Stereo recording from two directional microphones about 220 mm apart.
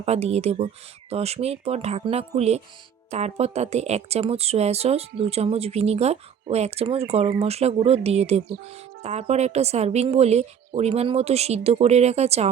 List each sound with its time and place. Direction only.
0.0 s speech: 30° right (ahead or behind)